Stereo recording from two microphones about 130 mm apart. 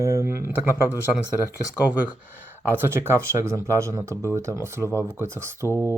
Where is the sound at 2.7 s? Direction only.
15° right (ahead or behind).